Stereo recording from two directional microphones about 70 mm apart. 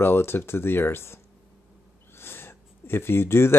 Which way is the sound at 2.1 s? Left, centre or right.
Left.